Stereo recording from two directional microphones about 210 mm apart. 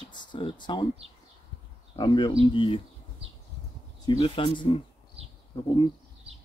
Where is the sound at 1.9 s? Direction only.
20° left (ahead or behind).